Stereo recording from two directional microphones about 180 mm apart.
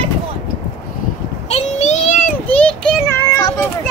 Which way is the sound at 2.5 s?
10° left (ahead or behind).